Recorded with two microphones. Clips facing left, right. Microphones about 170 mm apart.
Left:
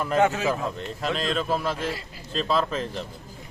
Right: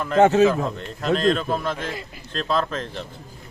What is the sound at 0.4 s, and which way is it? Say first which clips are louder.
Speech: right 6 dB; centre (ahead or behind).